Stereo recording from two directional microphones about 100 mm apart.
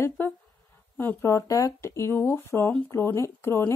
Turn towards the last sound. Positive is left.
turn(degrees=25)  # may be behind; listen again after turning